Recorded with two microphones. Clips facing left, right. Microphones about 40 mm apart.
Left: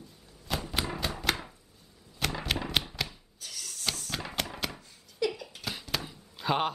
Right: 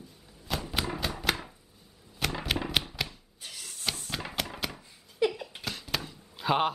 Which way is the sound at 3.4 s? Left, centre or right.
Right.